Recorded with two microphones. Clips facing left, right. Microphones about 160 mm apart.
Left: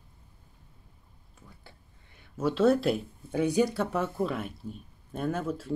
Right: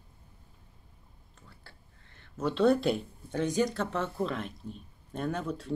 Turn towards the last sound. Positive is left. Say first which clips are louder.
# left 2 dB
turn(degrees=5)  # may be behind; listen again after turning